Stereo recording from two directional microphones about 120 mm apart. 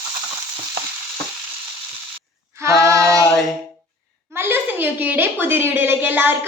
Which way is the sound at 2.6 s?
25° right (ahead or behind).